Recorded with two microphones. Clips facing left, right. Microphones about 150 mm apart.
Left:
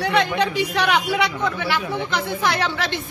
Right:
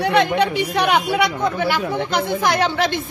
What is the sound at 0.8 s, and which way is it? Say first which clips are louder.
A woman's voice: right 4 dB; 45° right (ahead or behind).